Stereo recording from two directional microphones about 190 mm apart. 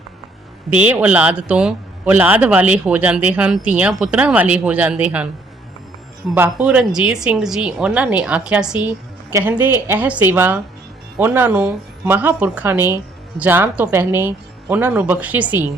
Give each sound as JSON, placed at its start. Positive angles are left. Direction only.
{"t": 0.7, "sound": "a man's voice", "side_deg": -5}
{"t": 6.3, "sound": "a man's voice", "side_deg": -10}